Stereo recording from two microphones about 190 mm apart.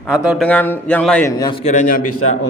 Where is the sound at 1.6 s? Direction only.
45° left (ahead or behind).